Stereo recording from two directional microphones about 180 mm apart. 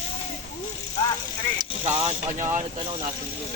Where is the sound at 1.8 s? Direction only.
40° right (ahead or behind).